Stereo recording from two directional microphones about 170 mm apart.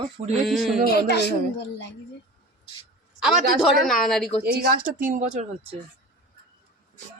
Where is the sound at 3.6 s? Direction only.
Centre (ahead or behind).